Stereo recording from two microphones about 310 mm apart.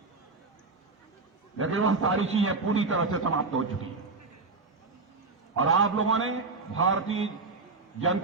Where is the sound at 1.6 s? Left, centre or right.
Right.